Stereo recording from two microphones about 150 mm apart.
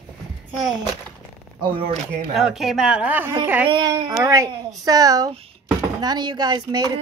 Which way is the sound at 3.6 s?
30° right (ahead or behind).